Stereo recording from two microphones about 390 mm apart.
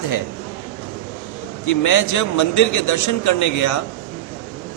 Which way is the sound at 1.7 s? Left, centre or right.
Left.